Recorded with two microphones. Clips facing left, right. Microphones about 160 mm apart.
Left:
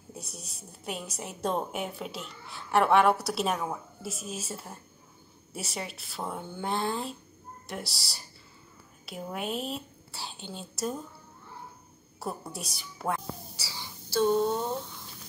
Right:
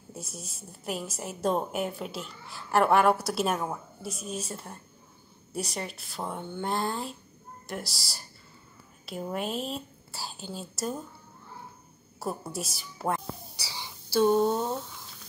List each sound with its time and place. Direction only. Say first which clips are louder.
0.1 s a woman's voice: right 2 dB; centre (ahead or behind)
12.2 s a woman's voice: right 3 dB; centre (ahead or behind)
13.6 s whispering: right 1 dB; 15° right (ahead or behind)